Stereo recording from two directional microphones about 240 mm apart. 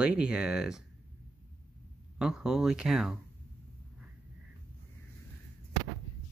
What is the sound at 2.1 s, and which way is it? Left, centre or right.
Speech, centre.